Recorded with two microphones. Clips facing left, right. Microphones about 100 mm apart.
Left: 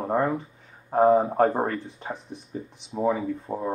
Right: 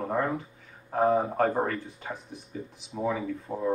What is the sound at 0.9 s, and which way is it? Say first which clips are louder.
Speech: left 5 dB; 30° left (ahead or behind).